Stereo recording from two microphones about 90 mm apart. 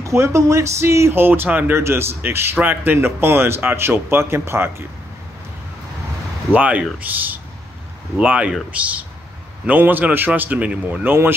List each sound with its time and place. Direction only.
0.0 s speech: 35° right (ahead or behind)
6.5 s speech: 15° right (ahead or behind)